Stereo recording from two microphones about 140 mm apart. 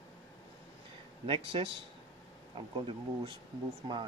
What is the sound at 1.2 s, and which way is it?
Speech, 40° right (ahead or behind).